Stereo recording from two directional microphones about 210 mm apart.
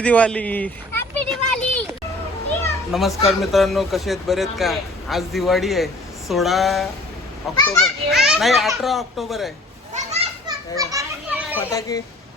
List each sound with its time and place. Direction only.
0.0 s a sound: 5° left (ahead or behind)
2.9 s a man's voice: centre (ahead or behind)
9.9 s children playing: 30° right (ahead or behind)
10.4 s children playing: 15° right (ahead or behind)
11.5 s a child's voice: 15° left (ahead or behind)